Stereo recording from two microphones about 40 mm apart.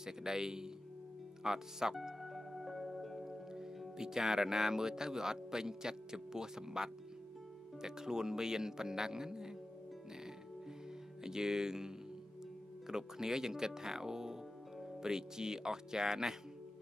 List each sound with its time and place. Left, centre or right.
0.0 s speech: centre
2.2 s music: centre
4.0 s speech: centre
11.2 s speech: centre